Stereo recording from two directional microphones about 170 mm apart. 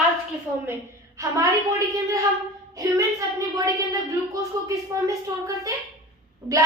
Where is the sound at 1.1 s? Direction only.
20° right (ahead or behind).